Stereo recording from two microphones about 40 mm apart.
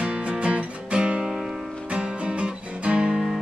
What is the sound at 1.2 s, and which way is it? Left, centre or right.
Music, centre.